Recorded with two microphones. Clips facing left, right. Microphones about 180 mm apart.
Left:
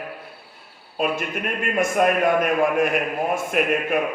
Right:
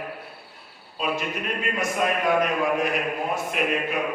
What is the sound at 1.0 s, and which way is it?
A man's voice, 50° left (ahead or behind).